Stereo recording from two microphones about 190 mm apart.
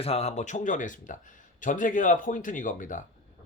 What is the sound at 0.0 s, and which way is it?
Speech, 35° left (ahead or behind).